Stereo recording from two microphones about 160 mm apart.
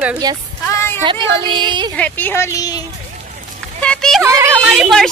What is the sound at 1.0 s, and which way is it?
Speech, 30° right (ahead or behind).